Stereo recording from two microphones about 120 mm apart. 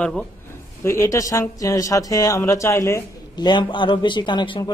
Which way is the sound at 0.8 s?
20° left (ahead or behind).